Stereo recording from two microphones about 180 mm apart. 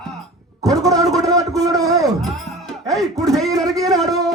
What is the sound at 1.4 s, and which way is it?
Speech, 20° right (ahead or behind).